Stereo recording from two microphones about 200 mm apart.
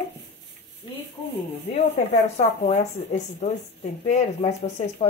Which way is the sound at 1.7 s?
35° left (ahead or behind).